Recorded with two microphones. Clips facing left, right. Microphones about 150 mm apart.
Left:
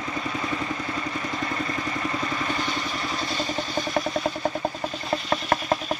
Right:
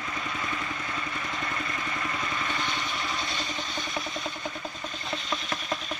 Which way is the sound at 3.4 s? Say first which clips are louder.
Left 7 dB; 40° left (ahead or behind).